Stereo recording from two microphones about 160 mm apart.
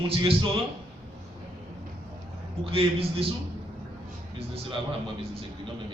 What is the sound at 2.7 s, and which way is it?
Speech, 35° right (ahead or behind).